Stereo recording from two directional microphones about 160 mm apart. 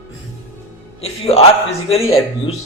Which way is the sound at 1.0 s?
40° left (ahead or behind).